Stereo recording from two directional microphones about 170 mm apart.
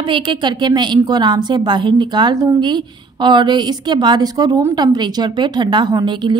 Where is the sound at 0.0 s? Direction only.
30° right (ahead or behind).